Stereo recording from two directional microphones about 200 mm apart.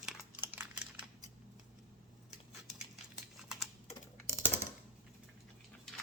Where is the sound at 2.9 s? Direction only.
Centre (ahead or behind).